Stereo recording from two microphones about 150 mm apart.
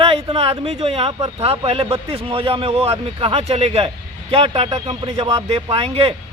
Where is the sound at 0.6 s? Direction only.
45° right (ahead or behind).